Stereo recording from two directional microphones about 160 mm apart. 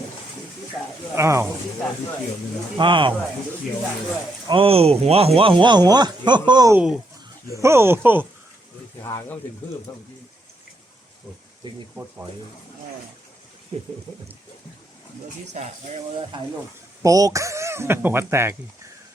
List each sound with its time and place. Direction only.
1.1 s speech: 15° right (ahead or behind)
2.7 s speech: 30° right (ahead or behind)
4.4 s speech: 35° right (ahead or behind)
6.7 s speech: 5° right (ahead or behind)
7.5 s speech: 15° right (ahead or behind)
11.6 s speech: 25° right (ahead or behind)
11.9 s speech: 10° right (ahead or behind)
15.6 s speech: 50° right (ahead or behind)
17.0 s speech: 20° right (ahead or behind)